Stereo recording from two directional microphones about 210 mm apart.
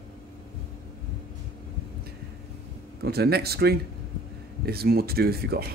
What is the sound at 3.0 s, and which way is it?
Speech, 50° right (ahead or behind).